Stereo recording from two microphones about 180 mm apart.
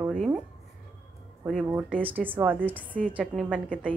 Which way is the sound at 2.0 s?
10° right (ahead or behind).